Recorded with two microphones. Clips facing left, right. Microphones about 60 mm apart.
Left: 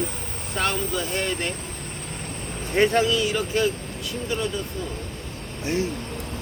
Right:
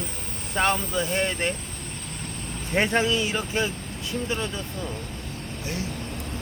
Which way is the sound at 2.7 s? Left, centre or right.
Right.